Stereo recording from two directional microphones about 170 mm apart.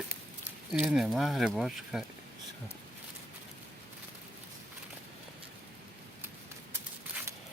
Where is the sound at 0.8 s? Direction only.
5° right (ahead or behind).